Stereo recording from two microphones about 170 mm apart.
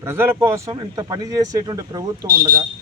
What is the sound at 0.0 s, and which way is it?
A man's voice, 15° right (ahead or behind).